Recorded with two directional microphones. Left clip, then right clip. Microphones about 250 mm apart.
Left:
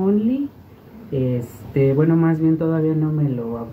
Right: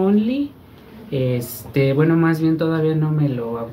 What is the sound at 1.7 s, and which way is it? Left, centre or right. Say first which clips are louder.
Speech: even; centre.